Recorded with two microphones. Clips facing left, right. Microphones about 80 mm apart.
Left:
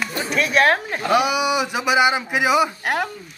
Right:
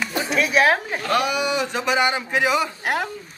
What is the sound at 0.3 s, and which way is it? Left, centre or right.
A man's voice, centre.